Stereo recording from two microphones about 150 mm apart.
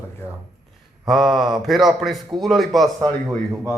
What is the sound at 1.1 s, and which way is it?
A man's voice, centre (ahead or behind).